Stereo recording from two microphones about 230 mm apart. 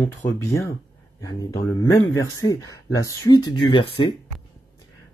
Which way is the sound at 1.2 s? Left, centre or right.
Centre.